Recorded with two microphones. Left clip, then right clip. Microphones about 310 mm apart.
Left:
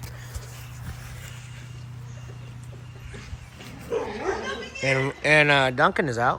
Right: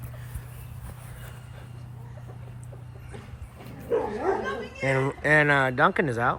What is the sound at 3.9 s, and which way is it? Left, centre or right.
Dog, right.